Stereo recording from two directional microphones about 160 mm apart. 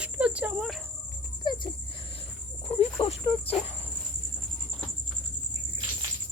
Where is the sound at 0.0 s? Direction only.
5° right (ahead or behind).